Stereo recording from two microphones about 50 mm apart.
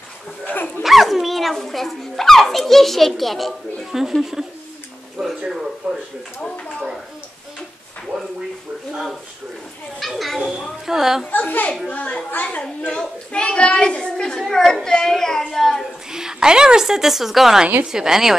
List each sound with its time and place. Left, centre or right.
0.5 s speech: left
0.8 s a woman's voice: centre
9.9 s a woman's voice: centre
11.2 s a child's voice: left
13.3 s a child's voice: centre
16.1 s a woman's voice: centre